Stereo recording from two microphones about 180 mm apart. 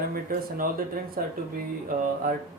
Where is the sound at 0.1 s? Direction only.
50° right (ahead or behind).